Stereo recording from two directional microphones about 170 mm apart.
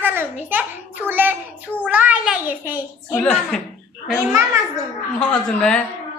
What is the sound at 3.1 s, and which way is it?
Speech, 5° left (ahead or behind).